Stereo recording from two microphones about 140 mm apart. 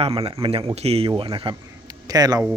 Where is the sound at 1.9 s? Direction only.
25° right (ahead or behind).